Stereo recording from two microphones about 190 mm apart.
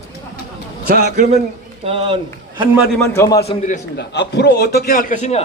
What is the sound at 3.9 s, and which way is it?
A man's voice, 60° left (ahead or behind).